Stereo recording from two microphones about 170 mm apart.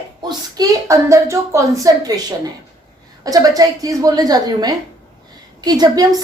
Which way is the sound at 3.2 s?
20° right (ahead or behind).